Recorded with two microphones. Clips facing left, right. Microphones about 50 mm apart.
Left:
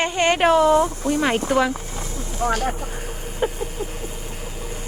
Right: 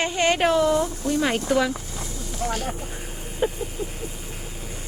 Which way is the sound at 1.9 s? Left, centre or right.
Left.